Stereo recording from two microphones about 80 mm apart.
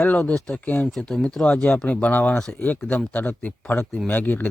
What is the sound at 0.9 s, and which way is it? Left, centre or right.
Speech, centre.